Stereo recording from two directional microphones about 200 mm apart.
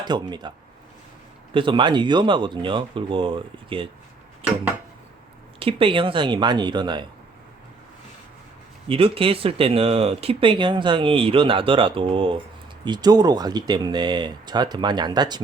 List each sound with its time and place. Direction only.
0.0 s speech: 20° right (ahead or behind)
1.5 s speech: 25° right (ahead or behind)
5.5 s speech: 25° right (ahead or behind)
8.9 s speech: 25° right (ahead or behind)